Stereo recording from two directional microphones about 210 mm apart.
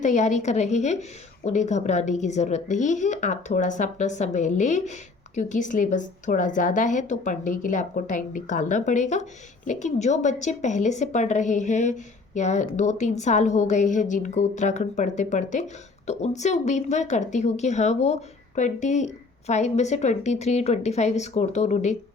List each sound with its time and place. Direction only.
0.0 s a woman's voice: 35° left (ahead or behind)